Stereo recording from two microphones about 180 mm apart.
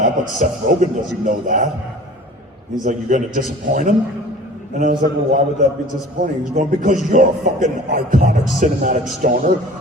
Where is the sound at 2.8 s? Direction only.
45° right (ahead or behind).